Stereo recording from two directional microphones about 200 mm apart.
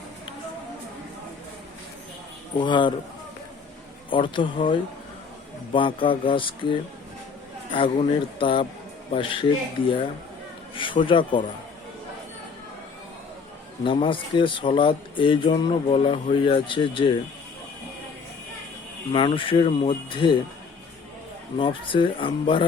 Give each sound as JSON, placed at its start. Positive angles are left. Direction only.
{"t": 2.6, "sound": "speech", "side_deg": 25}
{"t": 4.1, "sound": "speech", "side_deg": 25}
{"t": 7.8, "sound": "speech", "side_deg": 25}
{"t": 13.8, "sound": "speech", "side_deg": 25}
{"t": 19.1, "sound": "speech", "side_deg": 25}
{"t": 21.6, "sound": "speech", "side_deg": 25}